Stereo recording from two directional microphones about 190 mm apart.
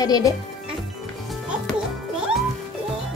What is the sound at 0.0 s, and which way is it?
Speech, 20° left (ahead or behind).